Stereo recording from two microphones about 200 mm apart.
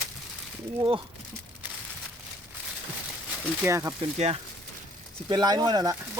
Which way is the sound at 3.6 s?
15° right (ahead or behind).